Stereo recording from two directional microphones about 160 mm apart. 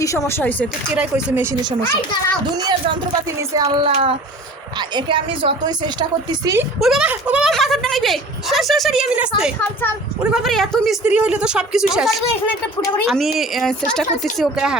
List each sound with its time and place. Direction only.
0.0 s speech: 20° left (ahead or behind)
0.9 s speech: 5° right (ahead or behind)
3.5 s a woman's voice: 25° right (ahead or behind)
6.7 s speech: centre (ahead or behind)